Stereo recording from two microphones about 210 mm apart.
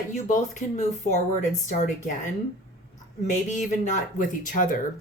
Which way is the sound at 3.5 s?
35° left (ahead or behind).